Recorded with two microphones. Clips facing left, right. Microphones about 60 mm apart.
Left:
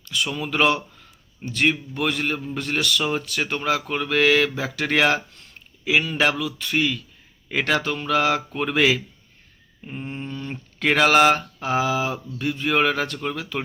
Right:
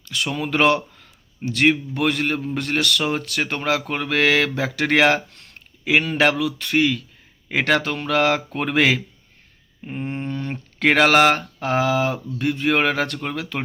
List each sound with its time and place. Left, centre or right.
0.3 s speech: right
3.4 s speech: right
5.3 s a sound: right
5.9 s speech: right
9.8 s a sound: right
10.8 s speech: right